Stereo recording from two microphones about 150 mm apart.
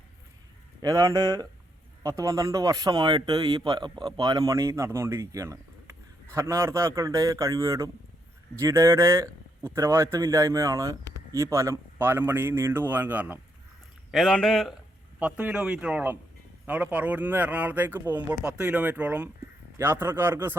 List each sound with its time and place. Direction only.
0.8 s speech: 20° right (ahead or behind)
14.1 s speech: centre (ahead or behind)
15.2 s speech: 10° right (ahead or behind)